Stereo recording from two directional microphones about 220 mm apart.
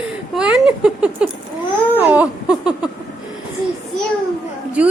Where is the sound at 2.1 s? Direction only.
5° right (ahead or behind).